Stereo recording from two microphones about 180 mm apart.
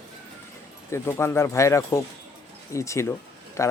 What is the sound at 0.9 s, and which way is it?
Speech, 15° left (ahead or behind).